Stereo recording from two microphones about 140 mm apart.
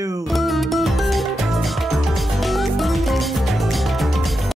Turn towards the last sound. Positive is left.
turn(degrees=0)  # may be behind; listen again after turning